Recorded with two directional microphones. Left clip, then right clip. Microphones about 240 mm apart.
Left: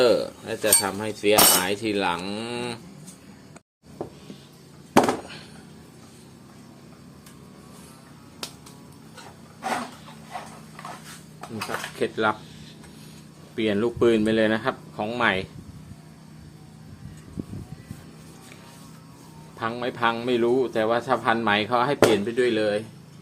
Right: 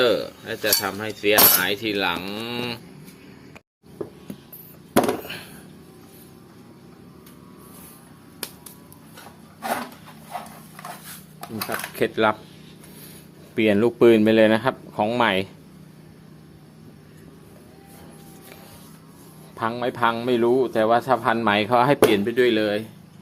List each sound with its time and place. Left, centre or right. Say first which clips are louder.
0.0 s cutlery: even; centre
11.3 s dishes: right 2 dB; right
13.6 s a man's voice: right 5 dB; right
19.5 s a man's voice: right 3 dB; right